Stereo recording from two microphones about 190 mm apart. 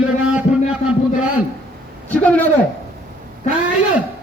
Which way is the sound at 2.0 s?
10° left (ahead or behind).